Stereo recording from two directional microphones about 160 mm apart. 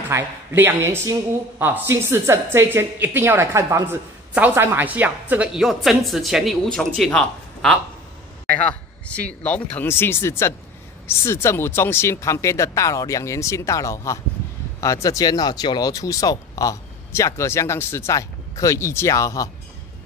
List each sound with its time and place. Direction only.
0.1 s a woman's voice: 15° right (ahead or behind); by 19.5 s 20° left (ahead or behind)